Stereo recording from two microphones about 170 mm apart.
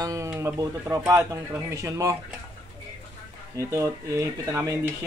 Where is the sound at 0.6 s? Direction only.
20° right (ahead or behind).